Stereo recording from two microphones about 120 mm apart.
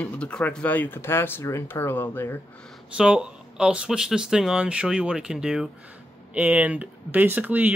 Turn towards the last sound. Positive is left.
turn(degrees=-15)  # may be behind; listen again after turning